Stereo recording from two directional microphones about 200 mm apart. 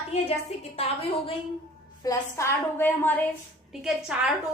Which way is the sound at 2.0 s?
15° left (ahead or behind).